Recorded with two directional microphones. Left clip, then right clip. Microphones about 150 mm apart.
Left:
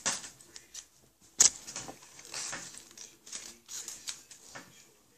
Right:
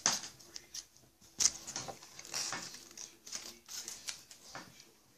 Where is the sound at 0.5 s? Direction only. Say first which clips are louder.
Right 1 dB; 15° left (ahead or behind).